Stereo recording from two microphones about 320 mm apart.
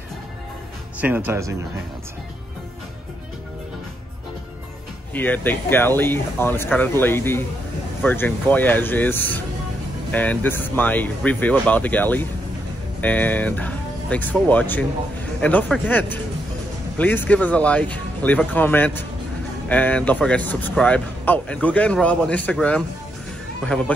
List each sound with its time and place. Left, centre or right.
1.0 s speech: centre
5.1 s speech: centre